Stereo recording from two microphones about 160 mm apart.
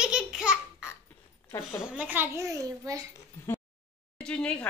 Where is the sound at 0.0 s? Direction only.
5° right (ahead or behind).